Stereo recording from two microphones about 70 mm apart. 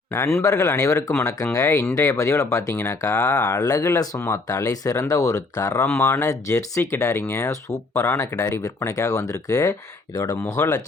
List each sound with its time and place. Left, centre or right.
0.1 s speech: left
0.4 s speech: left
2.7 s speech: left
3.0 s speech: left
3.9 s speech: left
5.8 s speech: left
6.1 s speech: left